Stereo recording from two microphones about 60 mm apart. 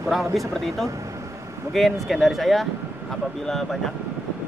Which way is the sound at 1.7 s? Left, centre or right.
Centre.